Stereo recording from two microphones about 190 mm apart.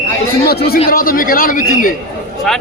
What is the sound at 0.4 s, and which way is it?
A man's voice, 55° left (ahead or behind).